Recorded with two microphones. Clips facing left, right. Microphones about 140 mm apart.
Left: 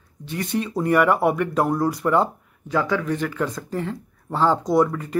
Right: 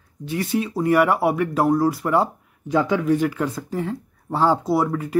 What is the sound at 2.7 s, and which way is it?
Speech, 20° right (ahead or behind).